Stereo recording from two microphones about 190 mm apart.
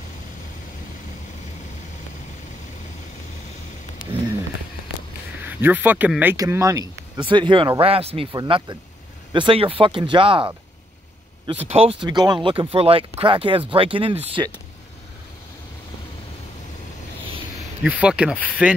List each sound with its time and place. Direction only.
5.5 s speech: 10° right (ahead or behind); by 10.5 s 25° right (ahead or behind)
11.6 s speech: 35° right (ahead or behind)
17.8 s speech: 5° right (ahead or behind)